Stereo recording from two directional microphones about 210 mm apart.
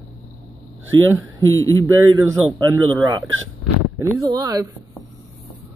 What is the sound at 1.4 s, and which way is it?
Speech, 75° right (ahead or behind).